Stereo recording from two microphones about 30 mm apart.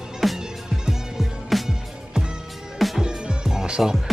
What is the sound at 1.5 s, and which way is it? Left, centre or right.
Music, centre.